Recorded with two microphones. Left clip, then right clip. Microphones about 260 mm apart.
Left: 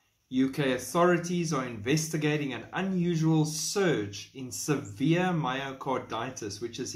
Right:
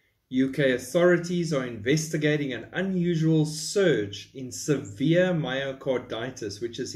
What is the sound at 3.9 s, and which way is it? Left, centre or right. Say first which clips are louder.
Speech: right 5 dB; left.